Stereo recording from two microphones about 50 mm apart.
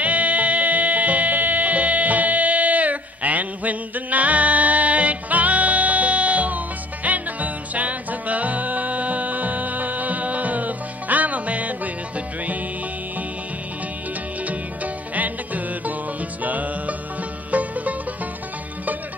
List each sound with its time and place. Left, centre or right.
0.0 s music: right
15.1 s music: right